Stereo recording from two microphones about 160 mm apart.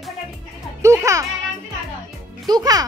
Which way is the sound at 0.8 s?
20° right (ahead or behind).